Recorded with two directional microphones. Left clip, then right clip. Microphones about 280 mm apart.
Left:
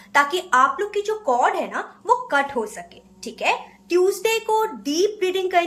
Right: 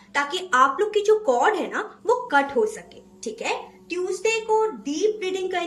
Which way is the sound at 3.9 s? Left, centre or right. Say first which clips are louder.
Left 5 dB; centre.